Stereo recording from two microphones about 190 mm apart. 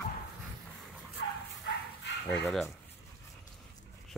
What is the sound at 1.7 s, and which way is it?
Bow-wow, 65° left (ahead or behind).